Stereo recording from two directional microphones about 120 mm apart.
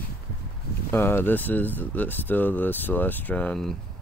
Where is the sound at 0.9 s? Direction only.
20° left (ahead or behind).